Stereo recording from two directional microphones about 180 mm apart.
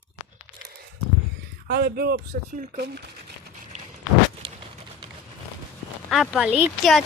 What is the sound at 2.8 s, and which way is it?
Speech, 65° right (ahead or behind).